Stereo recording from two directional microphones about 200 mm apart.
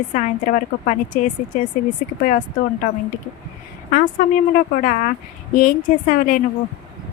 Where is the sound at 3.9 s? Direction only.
45° left (ahead or behind).